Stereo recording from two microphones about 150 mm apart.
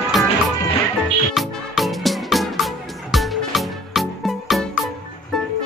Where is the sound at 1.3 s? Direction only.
Centre (ahead or behind).